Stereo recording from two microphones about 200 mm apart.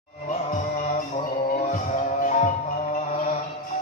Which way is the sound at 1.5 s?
40° left (ahead or behind).